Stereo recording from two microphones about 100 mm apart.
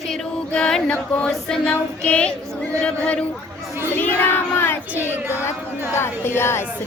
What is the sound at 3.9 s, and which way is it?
Child singing, 20° left (ahead or behind).